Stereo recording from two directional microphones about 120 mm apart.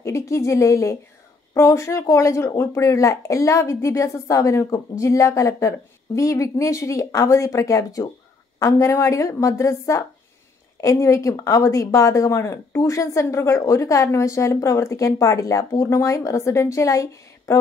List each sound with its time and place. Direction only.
0.0 s speech: 25° left (ahead or behind)